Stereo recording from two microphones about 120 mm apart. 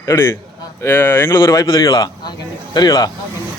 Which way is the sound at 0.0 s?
25° left (ahead or behind).